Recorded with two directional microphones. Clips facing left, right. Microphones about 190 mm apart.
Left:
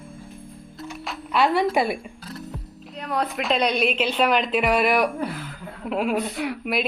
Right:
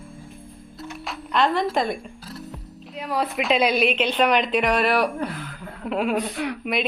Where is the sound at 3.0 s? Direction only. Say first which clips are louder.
Right 1 dB; centre (ahead or behind).